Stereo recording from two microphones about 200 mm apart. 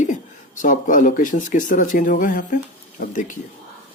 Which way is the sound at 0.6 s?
40° left (ahead or behind).